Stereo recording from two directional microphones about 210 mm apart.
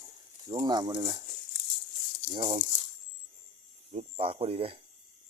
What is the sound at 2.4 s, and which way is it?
Speech, 25° right (ahead or behind).